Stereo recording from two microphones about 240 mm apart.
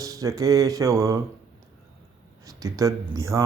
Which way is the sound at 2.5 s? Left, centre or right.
Centre.